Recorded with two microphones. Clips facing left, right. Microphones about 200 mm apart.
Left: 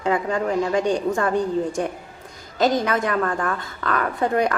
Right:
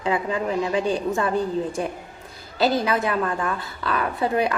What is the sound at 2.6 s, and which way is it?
Speech, 30° right (ahead or behind).